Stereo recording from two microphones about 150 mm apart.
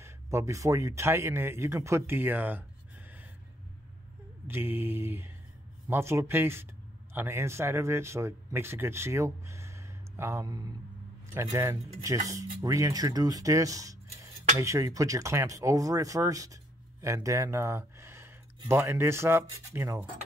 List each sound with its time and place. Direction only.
0.0 s speech: 20° right (ahead or behind)
4.5 s speech: 15° right (ahead or behind)